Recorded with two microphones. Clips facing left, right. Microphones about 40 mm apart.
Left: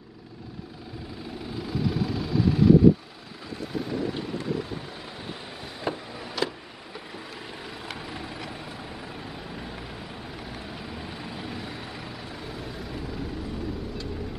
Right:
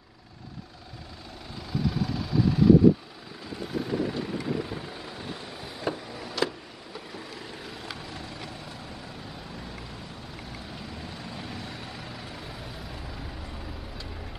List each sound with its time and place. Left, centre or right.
1.6 s vehicle: centre
3.7 s vehicle: centre
5.1 s vehicle: centre